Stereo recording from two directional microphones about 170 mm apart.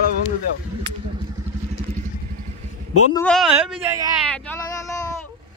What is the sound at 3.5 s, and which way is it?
Speech, 10° right (ahead or behind).